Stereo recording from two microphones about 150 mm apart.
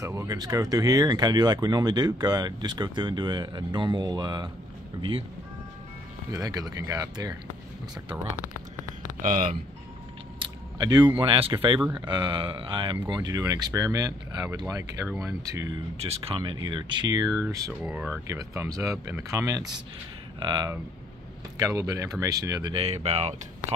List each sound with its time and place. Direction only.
0.0 s speech: 20° right (ahead or behind)
6.3 s speech: 25° right (ahead or behind)
9.2 s speech: 60° right (ahead or behind)
10.4 s biting: 30° right (ahead or behind)
11.1 s speech: 35° right (ahead or behind); by 15.8 s 20° right (ahead or behind)
16.0 s speech: 40° right (ahead or behind); by 17.7 s 20° right (ahead or behind)
17.8 s speech: 10° right (ahead or behind); by 23.3 s 45° right (ahead or behind)